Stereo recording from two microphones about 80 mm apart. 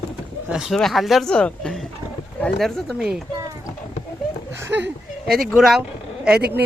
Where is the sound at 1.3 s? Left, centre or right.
Centre.